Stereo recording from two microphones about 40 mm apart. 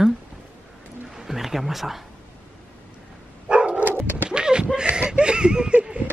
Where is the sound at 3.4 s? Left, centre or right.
Right.